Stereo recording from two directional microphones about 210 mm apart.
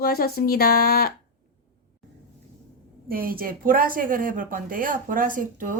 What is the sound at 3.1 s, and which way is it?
Speech, 45° right (ahead or behind).